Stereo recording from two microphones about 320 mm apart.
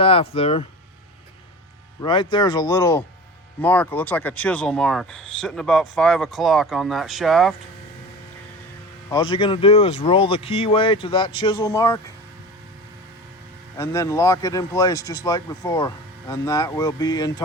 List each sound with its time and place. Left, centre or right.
0.0 s speech: centre
2.0 s speech: centre
9.0 s speech: centre
13.7 s speech: centre